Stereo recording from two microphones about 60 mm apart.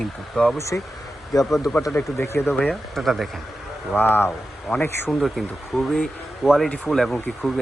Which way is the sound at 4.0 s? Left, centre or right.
Left.